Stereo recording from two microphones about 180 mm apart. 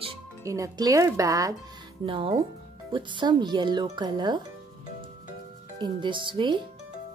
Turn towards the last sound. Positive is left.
turn(degrees=-25)  # may be behind; listen again after turning